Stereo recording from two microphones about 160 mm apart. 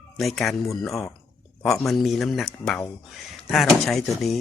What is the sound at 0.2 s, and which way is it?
Speech, centre (ahead or behind).